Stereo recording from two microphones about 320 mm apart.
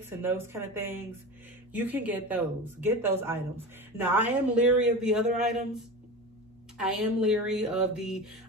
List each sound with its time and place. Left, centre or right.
0.2 s a man's voice: centre
6.8 s a man's voice: centre